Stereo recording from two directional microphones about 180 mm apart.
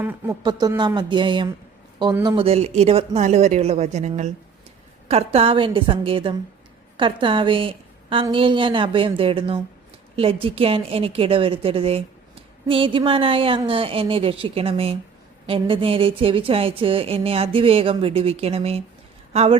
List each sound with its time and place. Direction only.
0.0 s speech: 10° right (ahead or behind)
0.4 s a woman's voice: 20° right (ahead or behind)